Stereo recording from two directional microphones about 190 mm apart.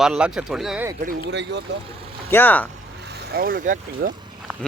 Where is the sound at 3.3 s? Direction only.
50° right (ahead or behind).